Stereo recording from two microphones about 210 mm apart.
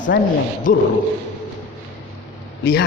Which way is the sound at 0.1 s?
50° left (ahead or behind).